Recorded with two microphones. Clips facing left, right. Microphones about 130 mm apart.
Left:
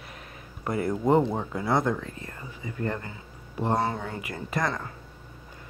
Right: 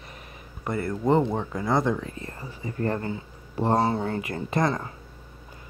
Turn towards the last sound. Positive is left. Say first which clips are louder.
# right 4 dB
turn(degrees=-25)  # may be behind; listen again after turning